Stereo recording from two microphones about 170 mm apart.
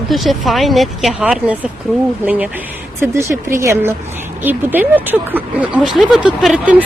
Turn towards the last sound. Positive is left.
turn(degrees=-5)  # may be behind; listen again after turning